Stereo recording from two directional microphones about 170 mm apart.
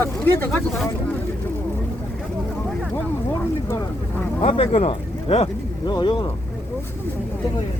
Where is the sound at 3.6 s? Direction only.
15° left (ahead or behind).